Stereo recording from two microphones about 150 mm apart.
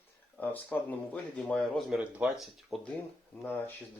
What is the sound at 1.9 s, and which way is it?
Speech, 5° right (ahead or behind).